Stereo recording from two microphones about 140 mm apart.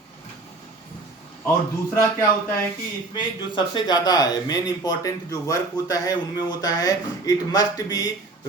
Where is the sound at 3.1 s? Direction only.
35° left (ahead or behind).